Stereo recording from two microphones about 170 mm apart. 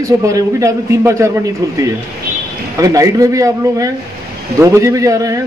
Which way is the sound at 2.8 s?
20° right (ahead or behind).